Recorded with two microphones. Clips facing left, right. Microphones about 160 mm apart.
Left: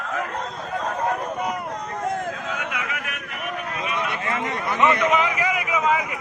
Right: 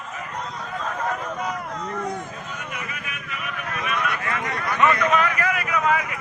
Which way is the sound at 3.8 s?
25° left (ahead or behind).